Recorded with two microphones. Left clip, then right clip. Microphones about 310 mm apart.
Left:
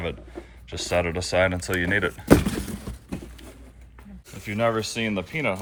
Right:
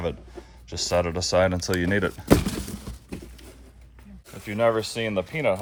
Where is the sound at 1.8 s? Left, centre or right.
Right.